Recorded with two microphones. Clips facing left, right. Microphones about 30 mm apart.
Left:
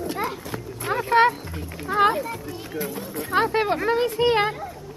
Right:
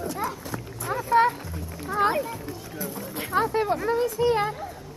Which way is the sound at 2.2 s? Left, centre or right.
Left.